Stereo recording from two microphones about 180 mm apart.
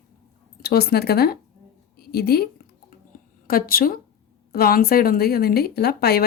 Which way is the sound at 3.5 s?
55° left (ahead or behind).